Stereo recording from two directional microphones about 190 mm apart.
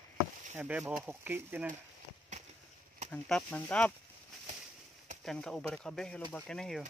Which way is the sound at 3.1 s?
5° left (ahead or behind).